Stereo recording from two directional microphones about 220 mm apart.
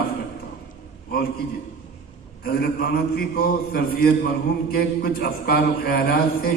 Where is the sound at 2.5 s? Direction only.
45° left (ahead or behind).